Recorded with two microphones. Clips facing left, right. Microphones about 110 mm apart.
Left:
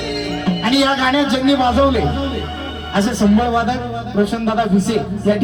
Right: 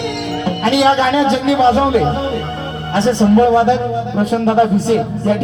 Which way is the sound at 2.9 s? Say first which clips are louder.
Right 3 dB; 25° right (ahead or behind).